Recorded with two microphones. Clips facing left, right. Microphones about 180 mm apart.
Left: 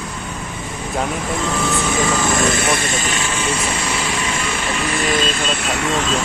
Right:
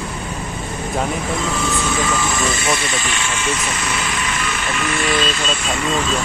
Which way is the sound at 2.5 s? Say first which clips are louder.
Left 2 dB; 55° left (ahead or behind).